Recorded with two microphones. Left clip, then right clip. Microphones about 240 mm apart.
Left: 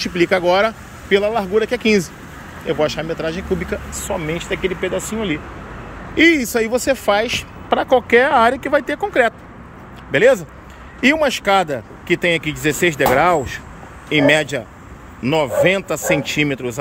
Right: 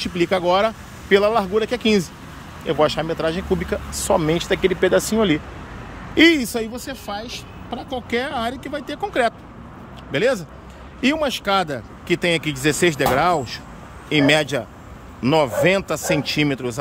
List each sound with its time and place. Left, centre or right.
0.0 s speech: centre
4.1 s speech: right
6.1 s speech: centre
6.7 s speech: centre